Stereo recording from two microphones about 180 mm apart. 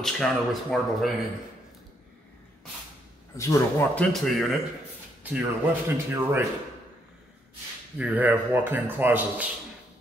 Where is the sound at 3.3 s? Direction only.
10° left (ahead or behind).